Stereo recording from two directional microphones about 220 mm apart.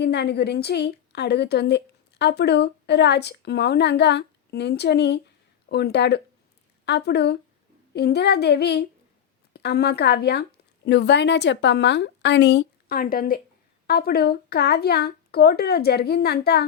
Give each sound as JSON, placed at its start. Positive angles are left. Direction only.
{"t": 0.0, "sound": "a woman's voice", "side_deg": 50}